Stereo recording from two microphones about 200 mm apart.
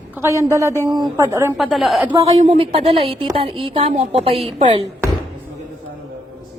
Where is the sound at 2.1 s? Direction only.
25° right (ahead or behind).